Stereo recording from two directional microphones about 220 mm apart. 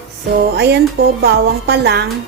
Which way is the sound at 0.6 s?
50° right (ahead or behind).